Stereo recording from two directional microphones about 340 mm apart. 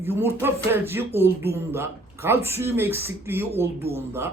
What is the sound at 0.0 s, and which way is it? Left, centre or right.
Speech, centre.